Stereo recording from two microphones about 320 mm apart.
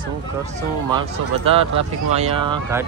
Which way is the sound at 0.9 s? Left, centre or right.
Centre.